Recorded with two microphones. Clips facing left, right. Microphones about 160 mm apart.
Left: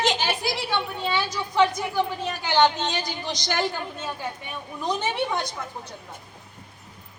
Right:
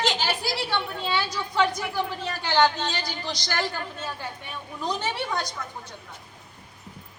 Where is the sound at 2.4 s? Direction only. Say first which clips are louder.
Left 1 dB; 20° left (ahead or behind).